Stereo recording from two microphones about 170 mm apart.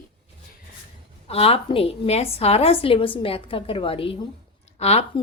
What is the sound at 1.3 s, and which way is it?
Speech, 35° left (ahead or behind).